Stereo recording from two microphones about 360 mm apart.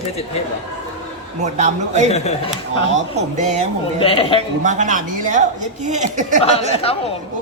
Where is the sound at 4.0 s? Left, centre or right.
Centre.